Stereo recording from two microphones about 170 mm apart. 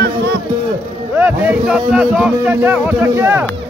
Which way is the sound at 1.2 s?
10° right (ahead or behind).